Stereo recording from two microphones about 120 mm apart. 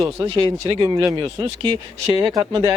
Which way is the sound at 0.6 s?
35° right (ahead or behind).